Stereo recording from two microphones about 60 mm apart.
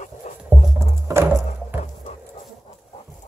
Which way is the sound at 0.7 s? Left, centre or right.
Right.